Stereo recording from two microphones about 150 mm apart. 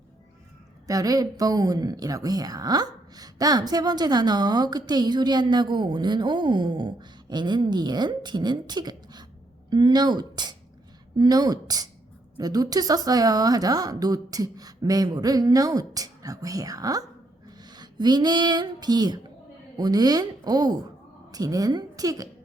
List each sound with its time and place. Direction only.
0.9 s speech: 25° right (ahead or behind)